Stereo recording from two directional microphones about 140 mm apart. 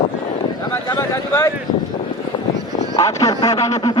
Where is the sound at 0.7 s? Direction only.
20° left (ahead or behind).